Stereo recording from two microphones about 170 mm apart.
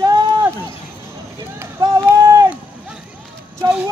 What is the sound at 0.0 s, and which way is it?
Run, 25° right (ahead or behind).